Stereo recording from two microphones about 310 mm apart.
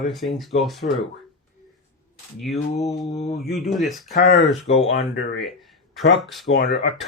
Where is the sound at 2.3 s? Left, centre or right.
Centre.